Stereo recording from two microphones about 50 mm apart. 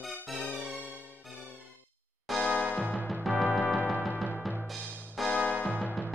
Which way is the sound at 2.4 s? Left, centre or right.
Left.